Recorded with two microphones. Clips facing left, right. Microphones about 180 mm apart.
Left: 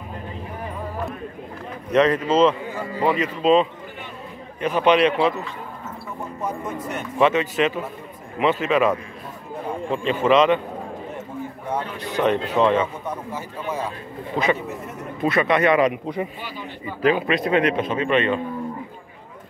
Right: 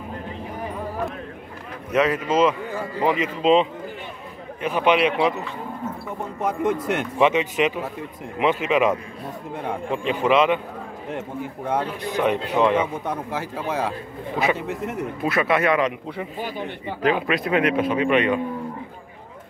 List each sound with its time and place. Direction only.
1.9 s a man's voice: 5° right (ahead or behind)
6.4 s speech: 85° right
7.2 s a man's voice: 15° right (ahead or behind)
12.0 s a man's voice: 10° right (ahead or behind)
13.1 s speech: 90° right
15.2 s speech: 5° right (ahead or behind)
15.8 s a man's voice: 15° left (ahead or behind)
16.3 s speech: 50° right (ahead or behind)
17.1 s a man's voice: centre (ahead or behind)